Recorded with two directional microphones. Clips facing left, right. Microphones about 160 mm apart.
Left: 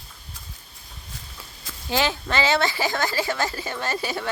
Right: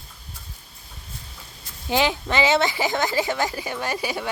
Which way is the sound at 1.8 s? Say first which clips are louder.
Right 2 dB; 15° right (ahead or behind).